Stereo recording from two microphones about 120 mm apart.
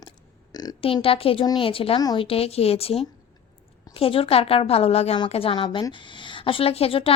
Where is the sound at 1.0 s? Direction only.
50° left (ahead or behind).